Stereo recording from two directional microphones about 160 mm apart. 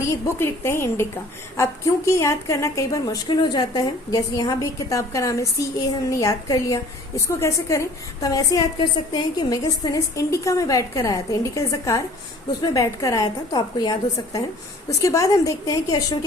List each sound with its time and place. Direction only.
0.3 s a woman's voice: 15° left (ahead or behind)